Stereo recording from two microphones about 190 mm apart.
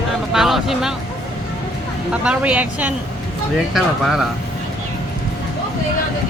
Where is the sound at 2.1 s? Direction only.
5° right (ahead or behind).